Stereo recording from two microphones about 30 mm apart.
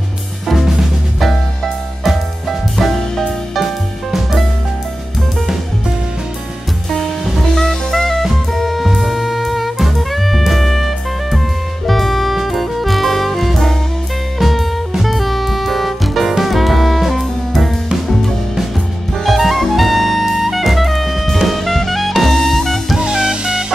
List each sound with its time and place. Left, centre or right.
0.5 s drum kit: centre
3.3 s music: centre
7.3 s music: centre
19.2 s jazz: centre
22.2 s music: centre
22.9 s music: right